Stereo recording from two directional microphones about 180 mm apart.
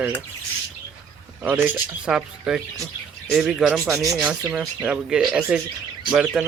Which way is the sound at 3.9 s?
15° right (ahead or behind).